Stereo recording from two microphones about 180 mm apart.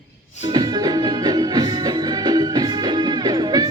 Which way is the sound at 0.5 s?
20° right (ahead or behind).